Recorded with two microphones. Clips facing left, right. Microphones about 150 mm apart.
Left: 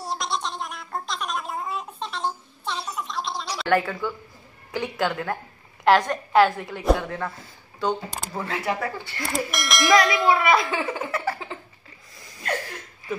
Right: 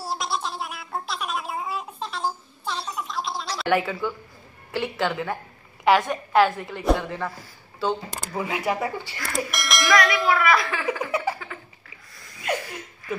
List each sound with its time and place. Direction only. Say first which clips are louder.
0.0 s a sound: even; 5° right (ahead or behind)
3.6 s a woman's voice: left 1 dB; 5° right (ahead or behind)
8.4 s speech: right 2 dB; 15° right (ahead or behind)
9.5 s a woman's voice: left 3 dB; centre (ahead or behind)
9.9 s a child's voice: left 2 dB; 20° left (ahead or behind)
11.1 s speech: right 2 dB; 15° right (ahead or behind)
12.4 s a sound: right 1 dB; 5° right (ahead or behind)